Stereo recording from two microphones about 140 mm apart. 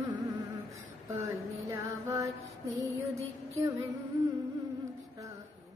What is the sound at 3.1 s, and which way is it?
Female singing, 25° right (ahead or behind).